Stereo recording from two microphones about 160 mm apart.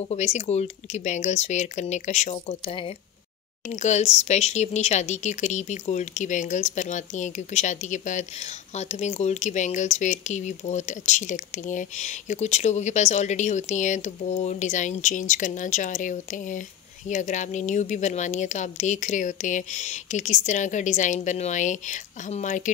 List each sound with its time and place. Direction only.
0.1 s speech: 45° left (ahead or behind)
3.6 s speech: 50° left (ahead or behind)